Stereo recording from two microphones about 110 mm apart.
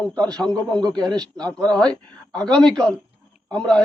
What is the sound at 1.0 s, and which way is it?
Speech, 40° right (ahead or behind).